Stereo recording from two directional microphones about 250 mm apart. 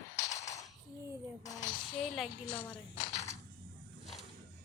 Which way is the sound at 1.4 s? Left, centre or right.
Centre.